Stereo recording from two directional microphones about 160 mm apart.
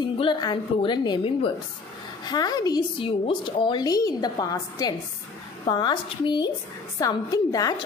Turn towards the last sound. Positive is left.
turn(degrees=20)  # may be behind; listen again after turning